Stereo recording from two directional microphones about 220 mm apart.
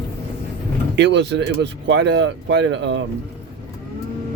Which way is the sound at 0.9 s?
50° right (ahead or behind).